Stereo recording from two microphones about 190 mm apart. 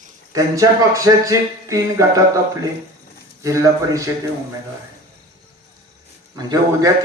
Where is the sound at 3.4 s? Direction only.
15° right (ahead or behind).